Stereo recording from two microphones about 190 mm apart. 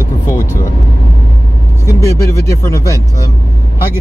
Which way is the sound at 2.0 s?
15° left (ahead or behind).